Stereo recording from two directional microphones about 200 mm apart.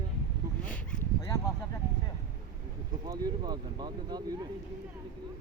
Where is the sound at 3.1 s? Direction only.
20° right (ahead or behind).